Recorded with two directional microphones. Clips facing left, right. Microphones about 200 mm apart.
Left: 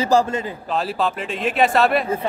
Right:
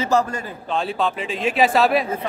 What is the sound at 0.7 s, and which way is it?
Speech, centre (ahead or behind).